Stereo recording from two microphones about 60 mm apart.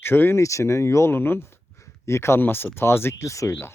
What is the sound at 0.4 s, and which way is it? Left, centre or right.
Speech, left.